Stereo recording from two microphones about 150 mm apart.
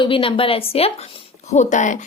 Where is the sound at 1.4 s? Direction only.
50° left (ahead or behind).